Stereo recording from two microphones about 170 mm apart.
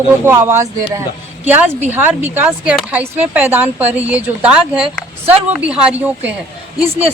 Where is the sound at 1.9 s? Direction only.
10° right (ahead or behind).